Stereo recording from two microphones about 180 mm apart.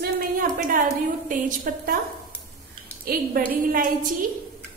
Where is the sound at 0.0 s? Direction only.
50° right (ahead or behind).